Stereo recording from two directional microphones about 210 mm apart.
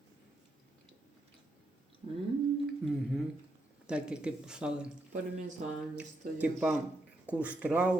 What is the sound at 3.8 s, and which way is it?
Speech, 5° right (ahead or behind).